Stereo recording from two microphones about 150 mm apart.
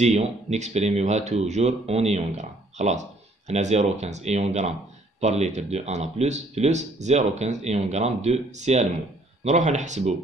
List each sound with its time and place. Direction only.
0.0 s speech: 45° right (ahead or behind)